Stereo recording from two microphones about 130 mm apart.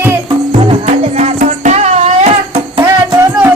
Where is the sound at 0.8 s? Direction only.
60° right (ahead or behind).